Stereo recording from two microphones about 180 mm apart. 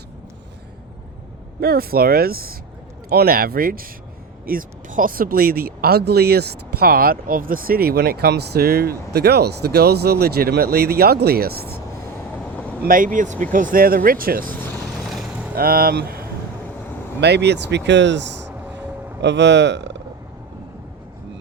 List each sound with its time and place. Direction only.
1.6 s speech: 55° right (ahead or behind)
12.8 s speech: 50° right (ahead or behind)
15.0 s vehicle: centre (ahead or behind)
15.5 s speech: 55° right (ahead or behind)
17.2 s speech: 70° right (ahead or behind)
18.6 s vehicle: 10° right (ahead or behind)
19.2 s speech: 75° right (ahead or behind)